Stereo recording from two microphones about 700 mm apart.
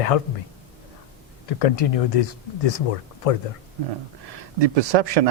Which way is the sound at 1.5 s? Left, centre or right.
Left.